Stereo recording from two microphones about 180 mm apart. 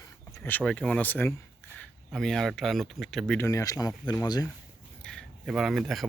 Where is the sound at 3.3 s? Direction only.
15° left (ahead or behind).